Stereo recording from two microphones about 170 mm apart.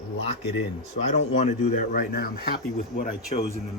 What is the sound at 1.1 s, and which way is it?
Speech, 40° left (ahead or behind).